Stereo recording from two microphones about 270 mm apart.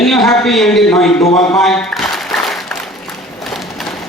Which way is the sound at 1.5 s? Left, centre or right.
Centre.